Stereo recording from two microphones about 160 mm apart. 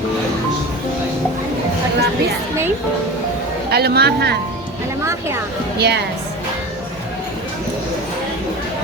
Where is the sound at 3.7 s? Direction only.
90° right.